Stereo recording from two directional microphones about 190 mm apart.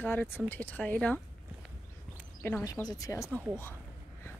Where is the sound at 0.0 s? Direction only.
10° left (ahead or behind).